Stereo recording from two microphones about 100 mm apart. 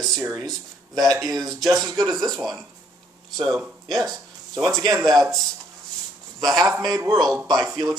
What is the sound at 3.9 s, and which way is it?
Speech, centre (ahead or behind).